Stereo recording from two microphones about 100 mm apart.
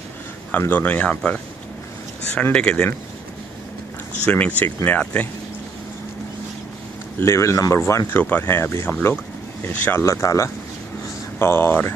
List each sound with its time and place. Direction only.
0.5 s speech: 20° left (ahead or behind)
2.5 s speech: 10° left (ahead or behind)
4.3 s speech: 15° left (ahead or behind)
7.2 s speech: 25° left (ahead or behind)